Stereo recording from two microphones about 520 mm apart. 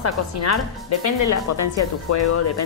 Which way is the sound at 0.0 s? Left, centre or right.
Left.